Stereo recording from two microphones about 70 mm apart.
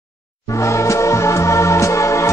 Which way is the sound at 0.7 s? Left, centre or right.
Left.